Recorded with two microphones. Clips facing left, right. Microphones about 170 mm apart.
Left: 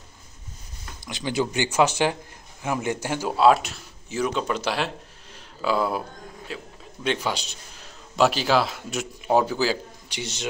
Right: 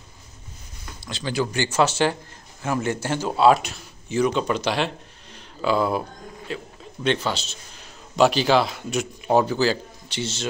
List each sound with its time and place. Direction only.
1.0 s a man's voice: 15° left (ahead or behind)
8.2 s a man's voice: centre (ahead or behind)